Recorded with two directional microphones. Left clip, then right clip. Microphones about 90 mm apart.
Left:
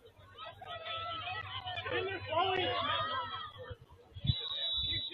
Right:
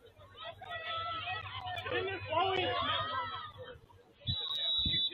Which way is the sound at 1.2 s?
Centre (ahead or behind).